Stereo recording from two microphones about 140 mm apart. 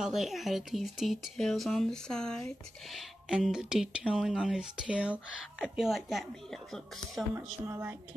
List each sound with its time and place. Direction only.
0.0 s speech: centre (ahead or behind)
7.3 s a woman's voice: 20° right (ahead or behind)